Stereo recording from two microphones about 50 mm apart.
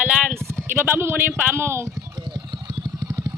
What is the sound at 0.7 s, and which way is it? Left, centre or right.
Speech, right.